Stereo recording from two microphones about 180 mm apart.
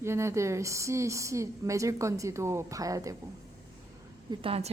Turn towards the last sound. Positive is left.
turn(degrees=-30)  # may be behind; listen again after turning